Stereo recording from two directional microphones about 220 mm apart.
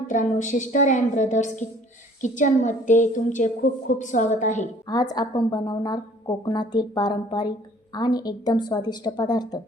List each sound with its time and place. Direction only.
0.1 s a woman's voice: 35° left (ahead or behind)
4.9 s speech: 20° left (ahead or behind)